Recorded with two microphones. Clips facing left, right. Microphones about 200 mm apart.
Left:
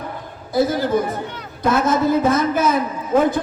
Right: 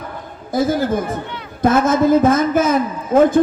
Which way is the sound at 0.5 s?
50° right (ahead or behind).